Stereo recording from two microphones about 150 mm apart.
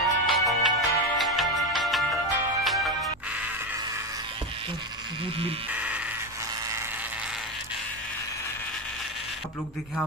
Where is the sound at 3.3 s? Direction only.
10° right (ahead or behind).